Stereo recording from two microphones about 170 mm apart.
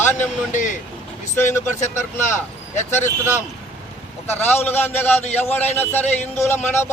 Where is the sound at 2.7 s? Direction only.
45° left (ahead or behind).